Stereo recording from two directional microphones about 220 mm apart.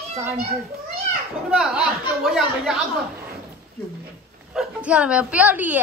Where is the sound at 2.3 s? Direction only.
Centre (ahead or behind).